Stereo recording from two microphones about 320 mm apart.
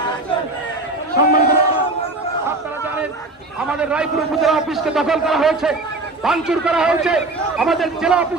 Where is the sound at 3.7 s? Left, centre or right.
Centre.